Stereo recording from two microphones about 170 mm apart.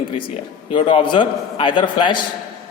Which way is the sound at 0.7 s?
30° left (ahead or behind).